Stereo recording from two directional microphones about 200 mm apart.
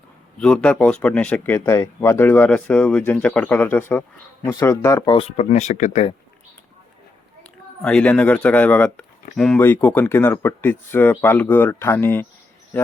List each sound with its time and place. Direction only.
0.3 s speech: 5° left (ahead or behind)
5.1 s speech: 30° left (ahead or behind)
7.8 s speech: 5° left (ahead or behind)